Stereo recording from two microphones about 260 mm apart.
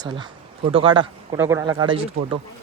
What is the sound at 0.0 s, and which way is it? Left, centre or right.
Speech, centre.